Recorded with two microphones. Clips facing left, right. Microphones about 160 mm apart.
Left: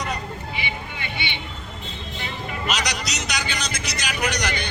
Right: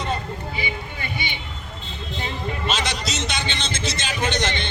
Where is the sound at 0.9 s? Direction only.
40° right (ahead or behind).